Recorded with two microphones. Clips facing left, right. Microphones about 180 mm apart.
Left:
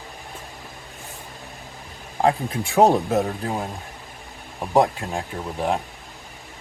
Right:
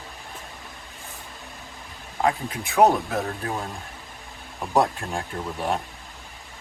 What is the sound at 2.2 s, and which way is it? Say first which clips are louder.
Speech: left 4 dB; 30° left (ahead or behind).